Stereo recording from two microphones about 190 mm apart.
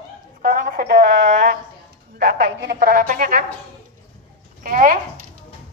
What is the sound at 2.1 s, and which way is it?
A woman's voice, 55° right (ahead or behind).